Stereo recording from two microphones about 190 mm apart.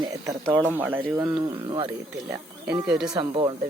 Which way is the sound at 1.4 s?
25° right (ahead or behind).